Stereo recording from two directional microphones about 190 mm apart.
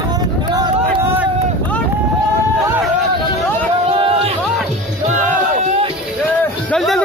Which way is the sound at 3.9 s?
25° right (ahead or behind).